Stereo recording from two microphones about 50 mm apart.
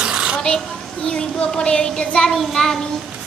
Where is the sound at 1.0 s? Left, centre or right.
Centre.